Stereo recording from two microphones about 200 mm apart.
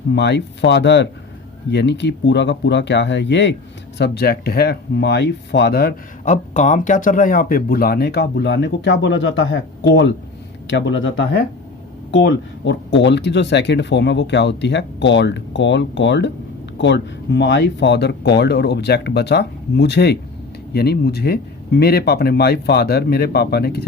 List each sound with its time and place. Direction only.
0.1 s speech: 60° left (ahead or behind)